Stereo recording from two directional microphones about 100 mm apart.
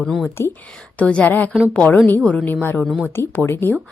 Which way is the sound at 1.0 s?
15° left (ahead or behind).